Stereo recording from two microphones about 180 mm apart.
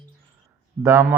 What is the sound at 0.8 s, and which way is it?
Speech, 15° right (ahead or behind).